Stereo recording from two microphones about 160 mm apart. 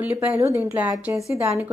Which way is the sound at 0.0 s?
10° right (ahead or behind).